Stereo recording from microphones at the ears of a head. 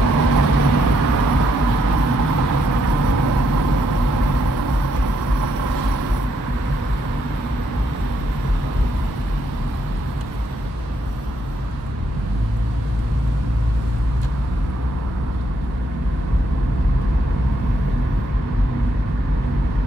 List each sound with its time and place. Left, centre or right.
0.0 s vehicle: right